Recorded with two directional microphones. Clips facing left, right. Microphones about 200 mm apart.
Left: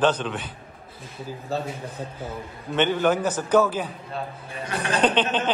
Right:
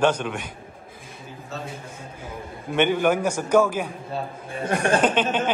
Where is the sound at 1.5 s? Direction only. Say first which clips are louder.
Left 7 dB; 35° left (ahead or behind).